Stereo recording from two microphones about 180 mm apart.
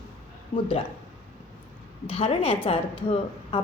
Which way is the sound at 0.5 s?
35° left (ahead or behind).